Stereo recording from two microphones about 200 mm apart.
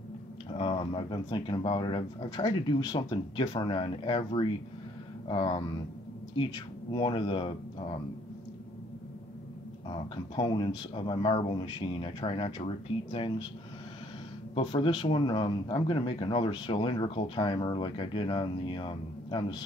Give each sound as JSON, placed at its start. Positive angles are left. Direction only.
{"t": 0.6, "sound": "speech", "side_deg": 25}
{"t": 10.3, "sound": "speech", "side_deg": 25}
{"t": 14.5, "sound": "speech", "side_deg": 25}